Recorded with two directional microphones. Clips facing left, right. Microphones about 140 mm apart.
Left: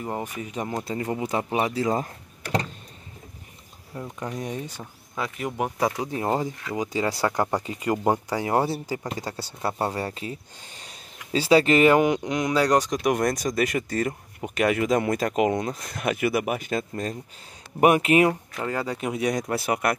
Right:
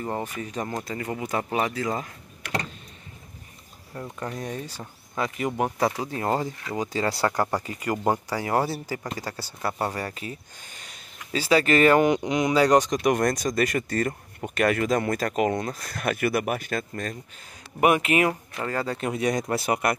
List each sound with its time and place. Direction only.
0.0 s speech: 10° left (ahead or behind)
1.7 s speech: 30° left (ahead or behind)
3.9 s speech: 10° left (ahead or behind)
5.1 s speech: centre (ahead or behind)
5.9 s speech: 15° left (ahead or behind)
12.1 s speech: centre (ahead or behind); by 18.3 s 30° left (ahead or behind)
18.6 s speech: 15° left (ahead or behind)